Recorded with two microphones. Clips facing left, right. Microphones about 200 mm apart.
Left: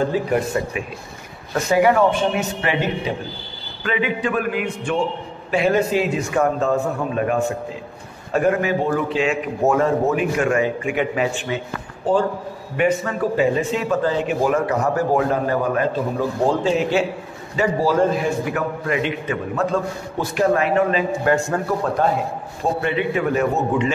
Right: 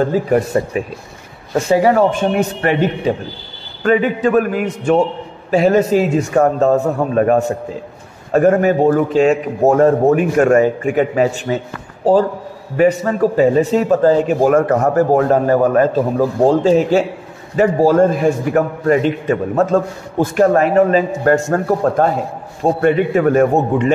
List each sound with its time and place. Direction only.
0.1 s a man's voice: 40° right (ahead or behind)
1.5 s a man's voice: 30° right (ahead or behind); by 2.8 s 50° right (ahead or behind)
3.8 s a man's voice: 45° right (ahead or behind)